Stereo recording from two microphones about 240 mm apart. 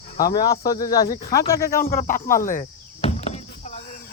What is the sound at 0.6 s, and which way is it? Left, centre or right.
Speech, left.